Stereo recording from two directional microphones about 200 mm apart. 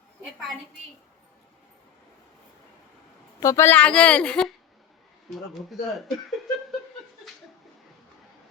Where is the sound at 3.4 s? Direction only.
15° left (ahead or behind).